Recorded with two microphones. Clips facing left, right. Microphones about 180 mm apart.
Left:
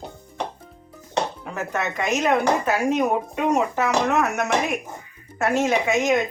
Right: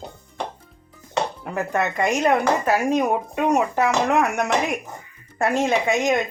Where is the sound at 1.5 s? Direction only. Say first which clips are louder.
Right 3 dB; 10° right (ahead or behind).